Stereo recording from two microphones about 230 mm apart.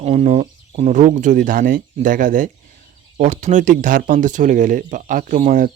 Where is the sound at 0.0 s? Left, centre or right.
Right.